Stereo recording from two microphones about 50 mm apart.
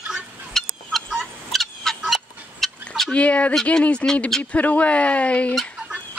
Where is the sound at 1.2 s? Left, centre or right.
Centre.